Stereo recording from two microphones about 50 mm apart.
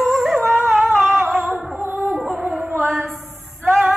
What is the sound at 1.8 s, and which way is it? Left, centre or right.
Music, right.